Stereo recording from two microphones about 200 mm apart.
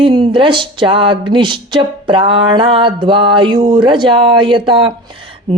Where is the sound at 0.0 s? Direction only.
25° right (ahead or behind).